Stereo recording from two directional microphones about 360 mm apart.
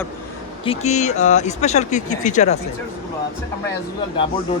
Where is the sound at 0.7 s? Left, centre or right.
Centre.